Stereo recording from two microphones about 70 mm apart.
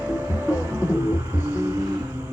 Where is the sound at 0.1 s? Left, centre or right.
Right.